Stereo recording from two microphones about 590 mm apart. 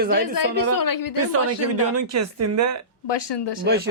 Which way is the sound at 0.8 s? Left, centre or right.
Left.